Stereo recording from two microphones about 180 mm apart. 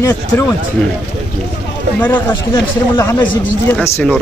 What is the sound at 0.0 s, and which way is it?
Speech, 15° left (ahead or behind).